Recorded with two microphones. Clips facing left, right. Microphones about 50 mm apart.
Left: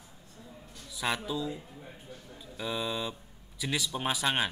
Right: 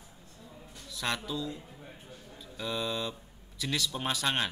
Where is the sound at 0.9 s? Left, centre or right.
Centre.